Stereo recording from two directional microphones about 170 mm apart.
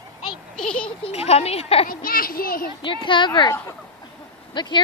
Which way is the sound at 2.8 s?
30° left (ahead or behind).